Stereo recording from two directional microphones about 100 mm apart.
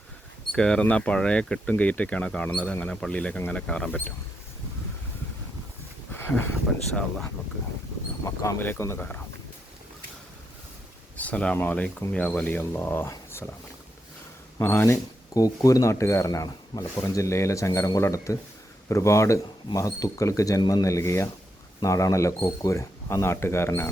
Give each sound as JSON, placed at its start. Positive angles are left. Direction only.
{"t": 0.5, "sound": "speech", "side_deg": 5}
{"t": 6.1, "sound": "a sound", "side_deg": 20}
{"t": 6.7, "sound": "speech", "side_deg": 10}
{"t": 8.2, "sound": "speech", "side_deg": 30}
{"t": 11.2, "sound": "speech", "side_deg": 15}
{"t": 14.6, "sound": "speech", "side_deg": 25}
{"t": 15.4, "sound": "speech", "side_deg": 35}